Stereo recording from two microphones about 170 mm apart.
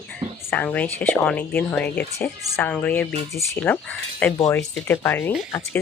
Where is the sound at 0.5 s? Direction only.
10° left (ahead or behind).